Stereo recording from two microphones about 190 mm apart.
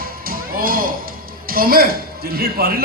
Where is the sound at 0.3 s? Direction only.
50° right (ahead or behind).